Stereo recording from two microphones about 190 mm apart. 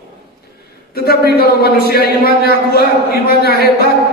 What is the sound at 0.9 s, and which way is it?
A man's voice, 55° left (ahead or behind).